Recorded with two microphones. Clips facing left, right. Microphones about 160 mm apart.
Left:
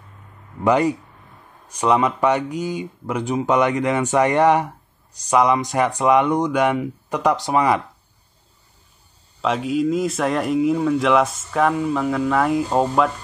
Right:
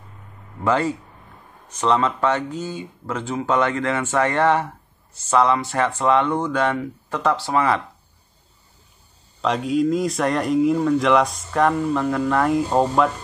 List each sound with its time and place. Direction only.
0.7 s speech: 15° left (ahead or behind)
9.4 s speech: centre (ahead or behind)